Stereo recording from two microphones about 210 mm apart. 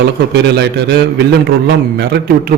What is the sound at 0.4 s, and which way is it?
A man's voice, 55° right (ahead or behind).